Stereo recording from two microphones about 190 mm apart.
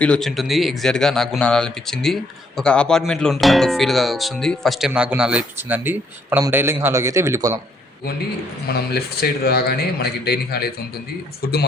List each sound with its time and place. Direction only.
0.0 s a man's voice: 5° left (ahead or behind); by 7.6 s 15° right (ahead or behind)
8.6 s speech: 55° left (ahead or behind)